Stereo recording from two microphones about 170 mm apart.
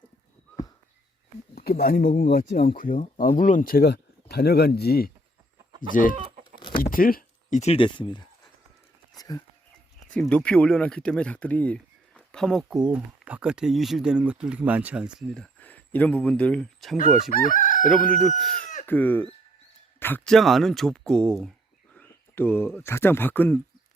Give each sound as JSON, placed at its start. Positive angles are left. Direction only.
{"t": 1.5, "sound": "speech", "side_deg": 60}
{"t": 5.9, "sound": "speech", "side_deg": 50}
{"t": 6.1, "sound": "chicken", "side_deg": -45}
{"t": 6.9, "sound": "a sound", "side_deg": 55}
{"t": 7.6, "sound": "speech", "side_deg": 35}
{"t": 9.1, "sound": "a sound", "side_deg": 20}
{"t": 10.1, "sound": "speech", "side_deg": 5}
{"t": 15.5, "sound": "speech", "side_deg": 10}
{"t": 17.3, "sound": "chicken", "side_deg": 50}
{"t": 18.1, "sound": "speech", "side_deg": 5}